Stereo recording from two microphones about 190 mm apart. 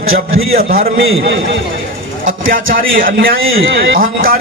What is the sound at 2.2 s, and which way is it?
A man's voice, 50° right (ahead or behind).